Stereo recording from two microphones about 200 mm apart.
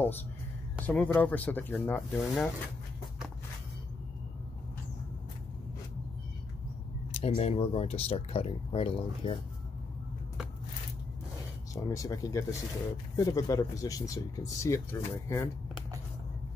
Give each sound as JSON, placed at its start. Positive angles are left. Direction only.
{"t": 0.8, "sound": "speech", "side_deg": 5}
{"t": 7.1, "sound": "speech", "side_deg": 30}
{"t": 11.7, "sound": "speech", "side_deg": 15}